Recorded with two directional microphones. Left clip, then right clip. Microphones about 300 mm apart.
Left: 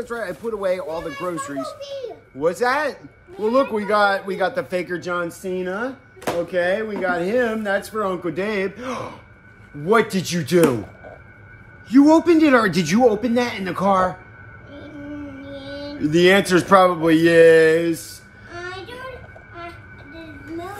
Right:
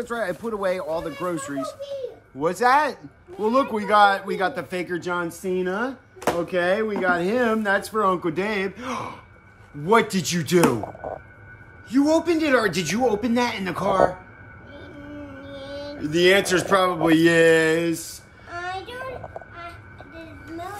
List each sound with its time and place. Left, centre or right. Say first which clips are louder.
0.0 s speech: even; centre
11.9 s a man's voice: left 6 dB; left
13.1 s speech: left 2 dB; centre
13.8 s a man's voice: left 2 dB; centre
15.4 s a sound: even; centre
16.0 s speech: left 3 dB; centre
16.9 s speech: left 3 dB; centre
18.5 s child singing: right 2 dB; right